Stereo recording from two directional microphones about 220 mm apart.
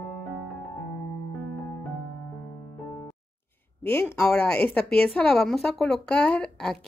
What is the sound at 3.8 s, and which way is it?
A woman's voice, 10° left (ahead or behind).